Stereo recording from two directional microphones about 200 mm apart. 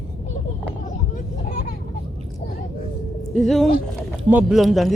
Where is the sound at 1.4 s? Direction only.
45° left (ahead or behind).